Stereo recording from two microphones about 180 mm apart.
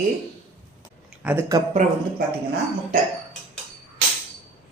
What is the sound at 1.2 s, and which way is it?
Speech, 10° right (ahead or behind).